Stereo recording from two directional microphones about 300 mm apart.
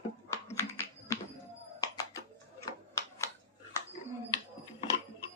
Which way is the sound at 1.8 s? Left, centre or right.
Centre.